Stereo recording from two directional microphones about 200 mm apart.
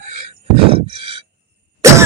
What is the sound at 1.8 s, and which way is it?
Cough, 15° right (ahead or behind).